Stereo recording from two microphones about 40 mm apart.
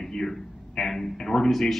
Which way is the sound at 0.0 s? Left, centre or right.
Centre.